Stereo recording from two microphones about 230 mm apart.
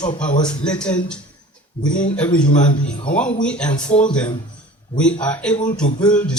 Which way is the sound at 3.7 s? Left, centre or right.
Left.